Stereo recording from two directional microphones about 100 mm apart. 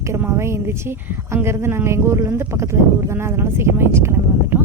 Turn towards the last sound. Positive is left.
turn(degrees=-25)  # may be behind; listen again after turning